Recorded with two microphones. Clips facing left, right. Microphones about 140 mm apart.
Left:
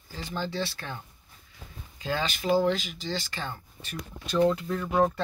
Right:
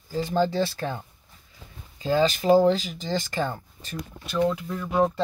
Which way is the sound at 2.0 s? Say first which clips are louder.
Right 8 dB; 40° right (ahead or behind).